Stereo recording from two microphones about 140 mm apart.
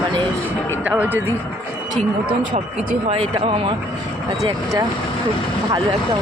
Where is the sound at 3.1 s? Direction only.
45° right (ahead or behind).